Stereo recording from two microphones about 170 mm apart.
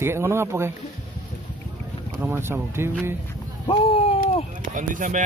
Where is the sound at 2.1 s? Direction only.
10° right (ahead or behind).